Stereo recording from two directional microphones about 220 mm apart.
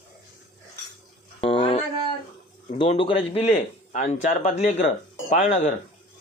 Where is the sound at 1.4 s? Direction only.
25° left (ahead or behind).